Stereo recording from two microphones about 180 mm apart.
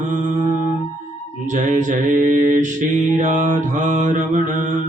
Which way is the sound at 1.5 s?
45° right (ahead or behind).